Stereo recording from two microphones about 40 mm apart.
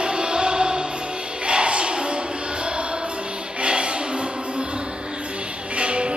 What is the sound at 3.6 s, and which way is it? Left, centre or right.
Music, right.